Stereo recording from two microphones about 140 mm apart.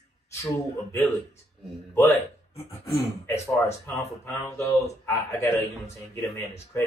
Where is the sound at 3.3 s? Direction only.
20° left (ahead or behind).